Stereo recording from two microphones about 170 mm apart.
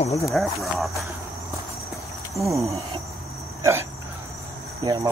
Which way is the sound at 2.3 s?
15° right (ahead or behind).